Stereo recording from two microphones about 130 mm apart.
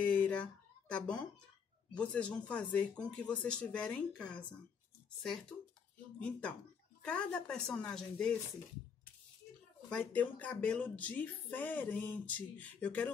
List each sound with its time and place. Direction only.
0.0 s a sound: 10° left (ahead or behind)
2.0 s speech: 10° left (ahead or behind)
7.0 s speech: 10° left (ahead or behind)
9.8 s speech: 5° left (ahead or behind)